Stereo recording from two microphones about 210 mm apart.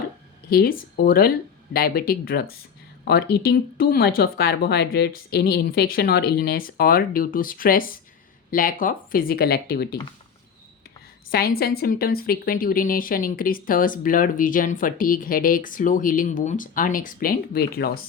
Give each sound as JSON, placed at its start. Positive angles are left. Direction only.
{"t": 0.5, "sound": "speech", "side_deg": 45}
{"t": 11.3, "sound": "a woman's voice", "side_deg": 45}